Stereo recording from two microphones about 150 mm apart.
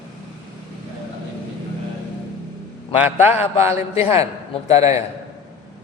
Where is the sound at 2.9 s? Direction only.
10° right (ahead or behind).